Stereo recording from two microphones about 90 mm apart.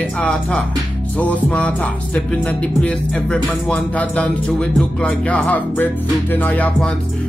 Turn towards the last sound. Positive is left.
turn(degrees=20)  # may be behind; listen again after turning